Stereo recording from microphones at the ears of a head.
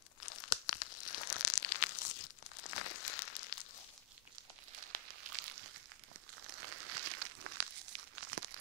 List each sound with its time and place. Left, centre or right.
0.2 s tearing: left
4.7 s a sound: right
6.4 s crumpling: right